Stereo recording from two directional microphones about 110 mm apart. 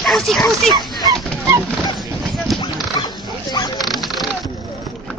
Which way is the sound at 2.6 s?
40° left (ahead or behind).